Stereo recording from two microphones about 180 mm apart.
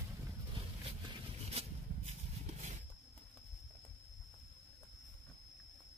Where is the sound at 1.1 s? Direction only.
35° right (ahead or behind).